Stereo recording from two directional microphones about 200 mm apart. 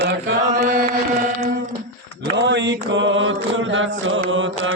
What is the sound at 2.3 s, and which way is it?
Mantra, 65° right (ahead or behind).